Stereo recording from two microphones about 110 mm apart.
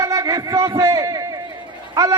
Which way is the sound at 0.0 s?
30° right (ahead or behind).